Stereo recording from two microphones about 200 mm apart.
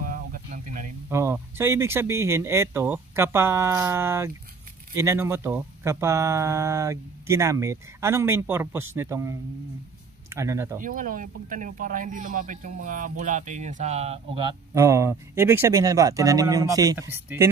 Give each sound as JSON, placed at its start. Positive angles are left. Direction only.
{"t": 0.0, "sound": "a sound", "side_deg": -45}
{"t": 1.1, "sound": "speech", "side_deg": -15}
{"t": 10.8, "sound": "speech", "side_deg": -40}
{"t": 14.7, "sound": "speech", "side_deg": -15}